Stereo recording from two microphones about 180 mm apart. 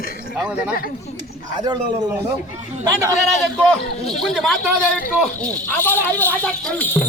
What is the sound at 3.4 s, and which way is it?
Speech, centre (ahead or behind).